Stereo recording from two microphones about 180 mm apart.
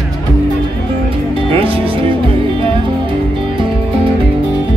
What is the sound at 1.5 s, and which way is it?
Music, 30° right (ahead or behind).